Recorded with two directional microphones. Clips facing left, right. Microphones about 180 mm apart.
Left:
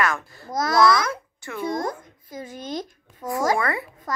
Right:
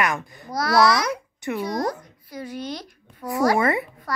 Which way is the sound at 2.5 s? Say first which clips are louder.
Left 1 dB; 45° left (ahead or behind).